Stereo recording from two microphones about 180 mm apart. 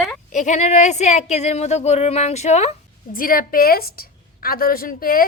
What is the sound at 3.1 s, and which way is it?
A woman's voice, 50° left (ahead or behind).